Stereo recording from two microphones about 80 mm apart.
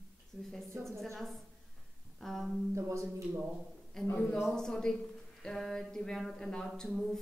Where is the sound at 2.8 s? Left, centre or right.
Right.